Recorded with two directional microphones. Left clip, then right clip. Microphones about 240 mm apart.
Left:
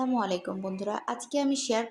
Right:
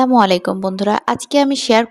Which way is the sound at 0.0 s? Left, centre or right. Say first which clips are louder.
Right 17 dB; right.